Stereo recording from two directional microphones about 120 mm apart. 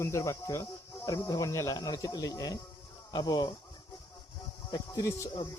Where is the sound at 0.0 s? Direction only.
25° left (ahead or behind).